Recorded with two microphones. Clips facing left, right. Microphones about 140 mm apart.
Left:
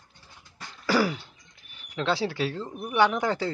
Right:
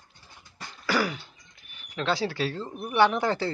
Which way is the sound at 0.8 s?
35° left (ahead or behind).